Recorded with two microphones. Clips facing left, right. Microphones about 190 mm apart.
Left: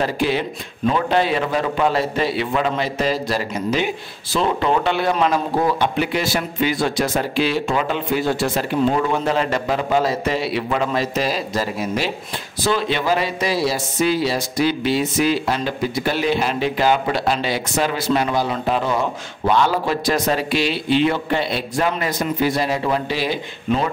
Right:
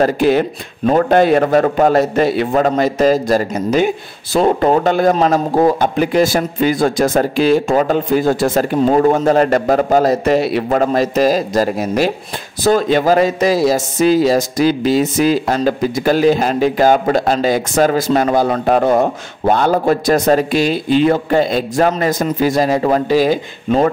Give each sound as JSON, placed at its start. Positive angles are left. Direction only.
{"t": 0.0, "sound": "a man's voice", "side_deg": -45}